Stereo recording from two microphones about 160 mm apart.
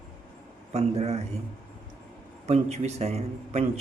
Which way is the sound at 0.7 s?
40° right (ahead or behind).